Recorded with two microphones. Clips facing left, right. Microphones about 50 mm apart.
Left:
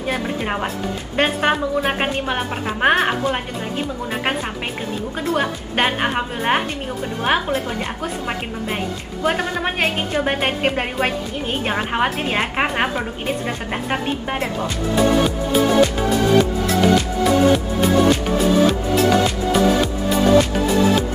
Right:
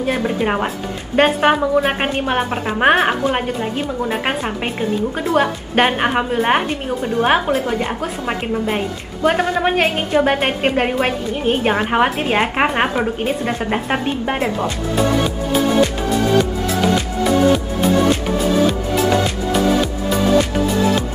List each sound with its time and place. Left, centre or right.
0.0 s a woman's voice: centre
8.3 s a woman's voice: centre